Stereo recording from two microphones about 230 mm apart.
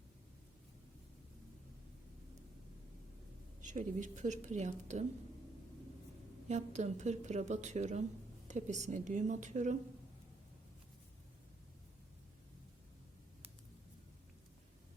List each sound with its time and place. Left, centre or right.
3.6 s a woman's voice: right
6.5 s a woman's voice: right